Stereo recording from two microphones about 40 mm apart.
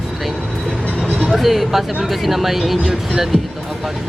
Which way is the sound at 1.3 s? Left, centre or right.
Centre.